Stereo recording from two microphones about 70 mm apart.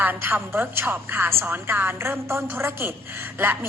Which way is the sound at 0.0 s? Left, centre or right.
Right.